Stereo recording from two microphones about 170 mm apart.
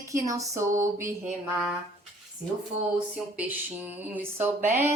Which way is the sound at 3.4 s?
10° right (ahead or behind).